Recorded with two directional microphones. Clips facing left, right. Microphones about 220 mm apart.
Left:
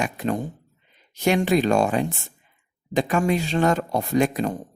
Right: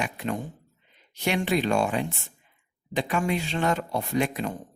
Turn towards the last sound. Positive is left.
turn(degrees=40)  # may be behind; listen again after turning